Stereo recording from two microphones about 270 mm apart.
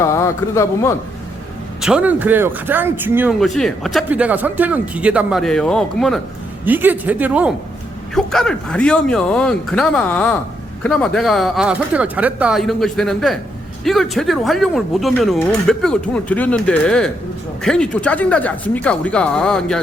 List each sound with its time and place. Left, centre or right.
0.0 s a man's voice: centre
1.8 s speech: centre